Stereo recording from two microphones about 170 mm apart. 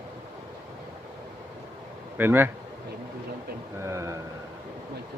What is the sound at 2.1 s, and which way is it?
Speech, 10° right (ahead or behind).